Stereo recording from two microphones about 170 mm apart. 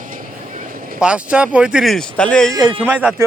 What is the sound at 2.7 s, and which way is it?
Speech, 10° right (ahead or behind).